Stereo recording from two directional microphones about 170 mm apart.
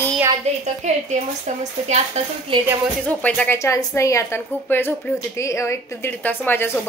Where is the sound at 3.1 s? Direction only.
10° left (ahead or behind).